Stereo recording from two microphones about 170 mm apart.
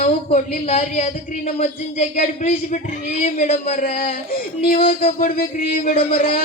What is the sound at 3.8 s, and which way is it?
Music, 55° left (ahead or behind).